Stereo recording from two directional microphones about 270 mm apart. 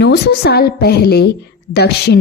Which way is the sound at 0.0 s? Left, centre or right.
Left.